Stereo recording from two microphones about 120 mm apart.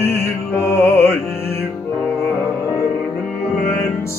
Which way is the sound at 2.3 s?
25° left (ahead or behind).